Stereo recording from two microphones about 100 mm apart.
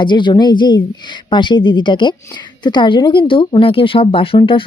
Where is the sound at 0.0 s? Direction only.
50° left (ahead or behind).